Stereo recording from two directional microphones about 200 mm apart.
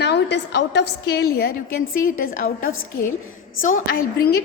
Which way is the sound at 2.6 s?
90° left.